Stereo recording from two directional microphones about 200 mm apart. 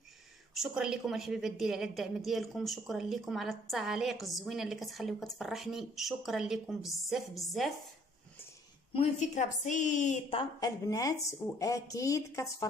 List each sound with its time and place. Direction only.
0.6 s a woman's voice: centre (ahead or behind)
8.9 s a woman's voice: 35° left (ahead or behind); by 12.6 s 15° left (ahead or behind)